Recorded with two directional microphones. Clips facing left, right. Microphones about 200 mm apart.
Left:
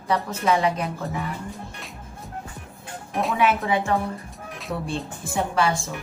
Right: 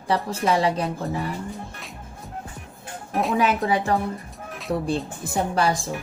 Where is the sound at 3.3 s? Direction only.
40° right (ahead or behind).